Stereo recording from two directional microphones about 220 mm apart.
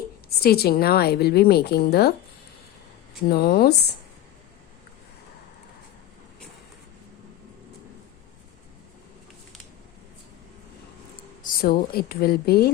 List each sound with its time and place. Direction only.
0.3 s a woman's voice: 45° left (ahead or behind)
3.2 s a woman's voice: 45° left (ahead or behind)
11.4 s a woman's voice: 40° left (ahead or behind)